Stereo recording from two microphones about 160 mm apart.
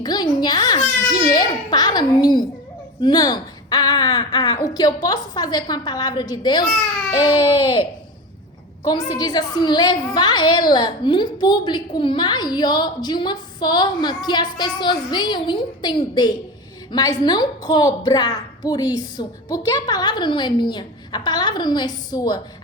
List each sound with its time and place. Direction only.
0.0 s a woman's voice: 25° left (ahead or behind)